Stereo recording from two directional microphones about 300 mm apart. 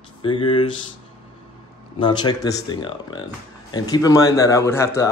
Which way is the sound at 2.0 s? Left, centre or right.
Centre.